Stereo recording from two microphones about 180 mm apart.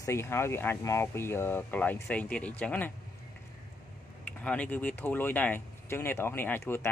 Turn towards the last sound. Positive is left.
turn(degrees=10)  # may be behind; listen again after turning